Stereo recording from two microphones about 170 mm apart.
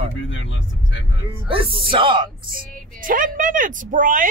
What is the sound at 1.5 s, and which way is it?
Speech, 30° right (ahead or behind).